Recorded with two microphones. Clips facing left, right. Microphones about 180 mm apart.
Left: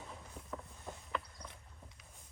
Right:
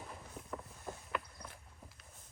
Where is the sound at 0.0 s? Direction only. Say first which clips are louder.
Right 1 dB; 5° right (ahead or behind).